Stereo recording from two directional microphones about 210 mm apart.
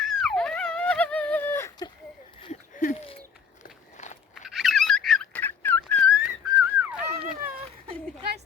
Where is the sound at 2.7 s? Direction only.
40° left (ahead or behind).